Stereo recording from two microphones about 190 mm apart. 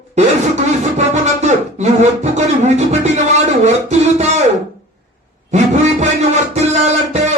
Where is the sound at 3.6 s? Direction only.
35° right (ahead or behind).